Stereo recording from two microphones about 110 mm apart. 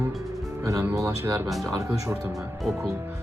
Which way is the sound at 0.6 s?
30° right (ahead or behind).